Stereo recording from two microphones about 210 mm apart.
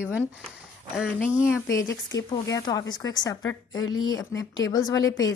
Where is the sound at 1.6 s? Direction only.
15° left (ahead or behind).